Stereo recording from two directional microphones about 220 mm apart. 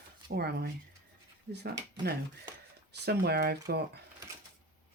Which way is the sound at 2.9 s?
45° right (ahead or behind).